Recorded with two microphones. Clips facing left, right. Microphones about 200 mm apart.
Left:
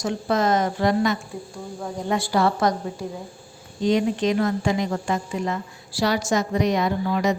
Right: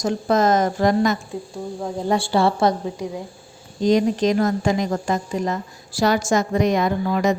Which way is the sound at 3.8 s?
40° right (ahead or behind).